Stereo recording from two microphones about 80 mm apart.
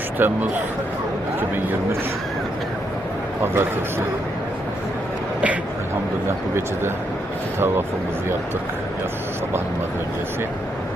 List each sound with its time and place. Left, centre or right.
0.2 s speech: right
3.4 s a man's voice: right
7.6 s speech: right